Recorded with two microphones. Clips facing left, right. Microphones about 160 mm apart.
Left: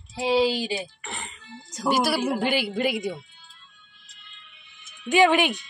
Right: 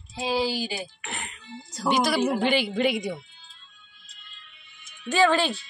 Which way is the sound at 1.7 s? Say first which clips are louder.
Even; 10° left (ahead or behind).